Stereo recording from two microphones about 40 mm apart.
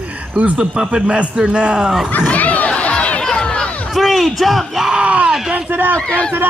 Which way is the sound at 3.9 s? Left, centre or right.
Centre.